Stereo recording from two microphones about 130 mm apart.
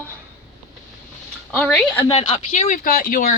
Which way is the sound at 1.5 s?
15° left (ahead or behind).